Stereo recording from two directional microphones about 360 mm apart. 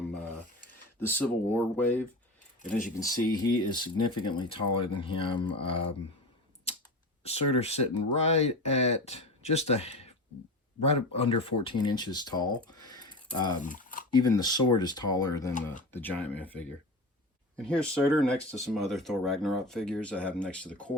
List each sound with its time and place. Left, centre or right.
1.0 s speech: centre
7.3 s speech: centre
14.2 s speech: centre
17.7 s speech: centre